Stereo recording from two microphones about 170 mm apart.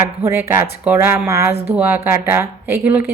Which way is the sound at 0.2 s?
15° right (ahead or behind).